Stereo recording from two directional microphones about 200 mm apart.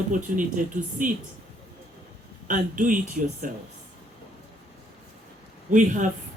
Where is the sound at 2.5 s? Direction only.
40° right (ahead or behind).